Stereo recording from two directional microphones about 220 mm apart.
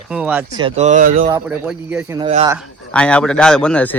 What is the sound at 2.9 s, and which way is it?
A man's voice, 5° left (ahead or behind).